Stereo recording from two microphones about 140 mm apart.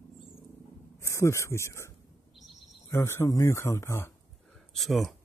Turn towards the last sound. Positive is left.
turn(degrees=0)  # may be behind; listen again after turning